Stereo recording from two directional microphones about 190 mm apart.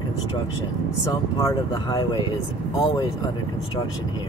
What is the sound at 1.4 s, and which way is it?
Speech, 20° left (ahead or behind).